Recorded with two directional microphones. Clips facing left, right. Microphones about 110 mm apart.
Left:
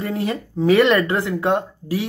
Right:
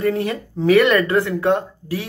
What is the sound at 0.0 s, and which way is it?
Speech, 20° left (ahead or behind).